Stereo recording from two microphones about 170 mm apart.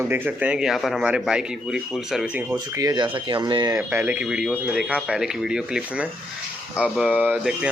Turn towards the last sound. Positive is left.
turn(degrees=-10)  # may be behind; listen again after turning